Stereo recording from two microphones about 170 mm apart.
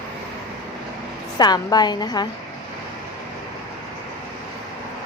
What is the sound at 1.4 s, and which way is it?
Speech, 25° left (ahead or behind).